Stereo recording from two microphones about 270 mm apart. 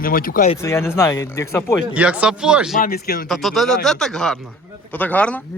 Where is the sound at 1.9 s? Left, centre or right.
Centre.